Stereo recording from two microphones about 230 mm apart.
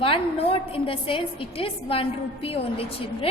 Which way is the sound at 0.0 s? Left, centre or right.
Left.